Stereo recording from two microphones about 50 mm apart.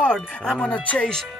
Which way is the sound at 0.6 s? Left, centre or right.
Left.